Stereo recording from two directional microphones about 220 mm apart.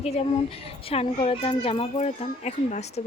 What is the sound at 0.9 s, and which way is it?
Speech, 25° left (ahead or behind).